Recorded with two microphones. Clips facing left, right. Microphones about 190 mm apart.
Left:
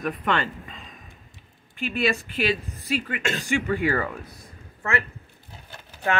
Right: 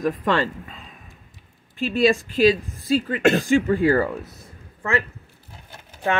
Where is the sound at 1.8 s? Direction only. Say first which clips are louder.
Right 6 dB; 35° right (ahead or behind).